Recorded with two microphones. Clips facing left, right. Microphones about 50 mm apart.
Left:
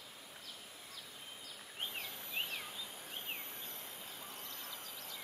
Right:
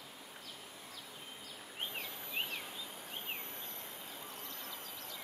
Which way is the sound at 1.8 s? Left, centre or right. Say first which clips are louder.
Right 1 dB; centre.